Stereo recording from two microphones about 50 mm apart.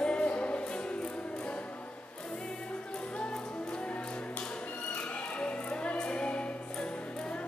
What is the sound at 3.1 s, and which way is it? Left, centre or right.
Music, centre.